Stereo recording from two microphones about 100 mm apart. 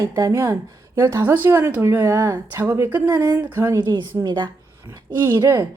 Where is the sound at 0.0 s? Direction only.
30° right (ahead or behind).